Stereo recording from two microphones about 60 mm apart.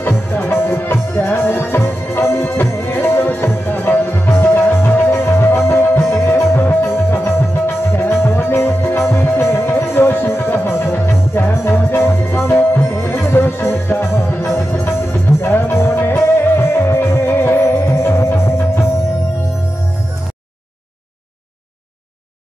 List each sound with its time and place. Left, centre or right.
0.0 s music: left